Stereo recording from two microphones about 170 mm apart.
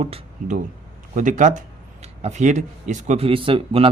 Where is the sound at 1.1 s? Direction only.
50° right (ahead or behind).